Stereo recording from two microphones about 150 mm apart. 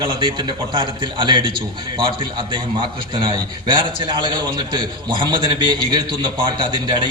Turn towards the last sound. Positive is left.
turn(degrees=-30)  # may be behind; listen again after turning